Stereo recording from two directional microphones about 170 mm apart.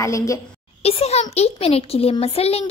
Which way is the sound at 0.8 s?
40° left (ahead or behind).